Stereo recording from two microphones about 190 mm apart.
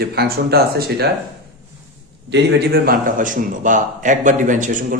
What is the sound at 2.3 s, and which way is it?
A man's voice, 55° right (ahead or behind).